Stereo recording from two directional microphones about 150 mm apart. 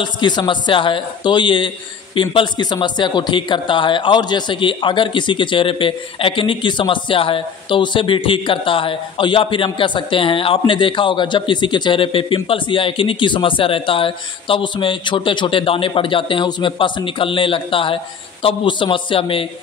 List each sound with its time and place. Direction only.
0.0 s speech: 30° left (ahead or behind)